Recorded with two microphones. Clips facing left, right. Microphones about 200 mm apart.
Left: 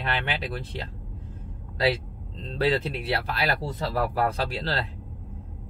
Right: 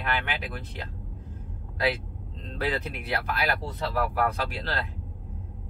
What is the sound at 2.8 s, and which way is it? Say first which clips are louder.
Speech: left 3 dB; 35° left (ahead or behind).